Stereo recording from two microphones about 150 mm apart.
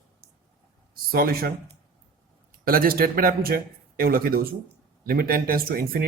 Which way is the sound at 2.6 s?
75° right (ahead or behind).